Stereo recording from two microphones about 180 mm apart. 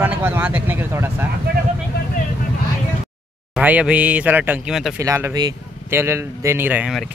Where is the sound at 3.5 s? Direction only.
5° right (ahead or behind).